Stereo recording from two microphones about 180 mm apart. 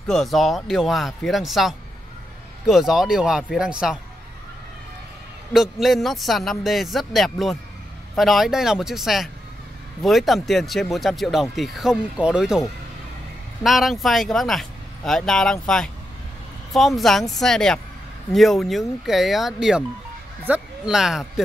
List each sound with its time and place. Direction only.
0.1 s speech: centre (ahead or behind)
5.5 s speech: centre (ahead or behind)